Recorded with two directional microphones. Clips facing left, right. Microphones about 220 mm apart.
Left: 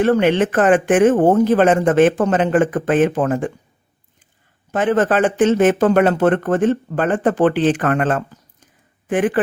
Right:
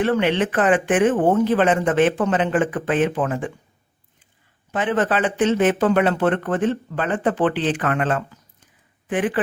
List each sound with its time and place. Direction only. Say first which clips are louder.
0.0 s speech: left 5 dB; 45° left (ahead or behind)
4.7 s speech: left 5 dB; 45° left (ahead or behind)